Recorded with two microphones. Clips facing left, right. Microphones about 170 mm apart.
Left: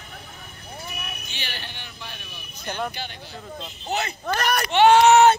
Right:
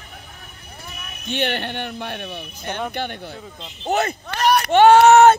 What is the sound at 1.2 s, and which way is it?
Speech, 60° right (ahead or behind).